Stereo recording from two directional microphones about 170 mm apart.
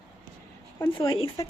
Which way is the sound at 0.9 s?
30° left (ahead or behind).